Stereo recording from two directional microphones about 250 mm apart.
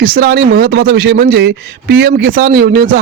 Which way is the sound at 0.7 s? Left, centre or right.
Right.